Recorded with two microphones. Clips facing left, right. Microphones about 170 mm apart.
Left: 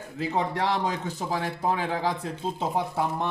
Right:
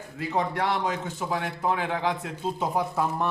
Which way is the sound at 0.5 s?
35° left (ahead or behind).